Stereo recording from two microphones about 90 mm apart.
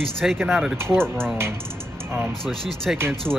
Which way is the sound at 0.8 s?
30° right (ahead or behind).